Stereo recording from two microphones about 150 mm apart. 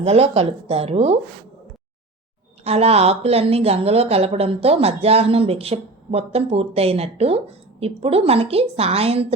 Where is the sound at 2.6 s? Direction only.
45° right (ahead or behind).